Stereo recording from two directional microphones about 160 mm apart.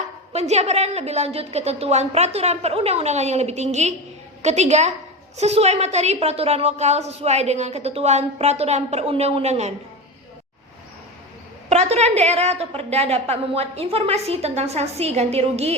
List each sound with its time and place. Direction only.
0.3 s a woman's voice: 45° right (ahead or behind)
11.7 s a woman's voice: 45° right (ahead or behind)